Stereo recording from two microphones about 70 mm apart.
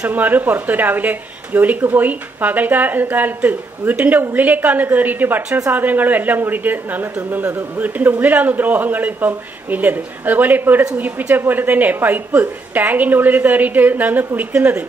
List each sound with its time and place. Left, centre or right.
0.0 s speech: right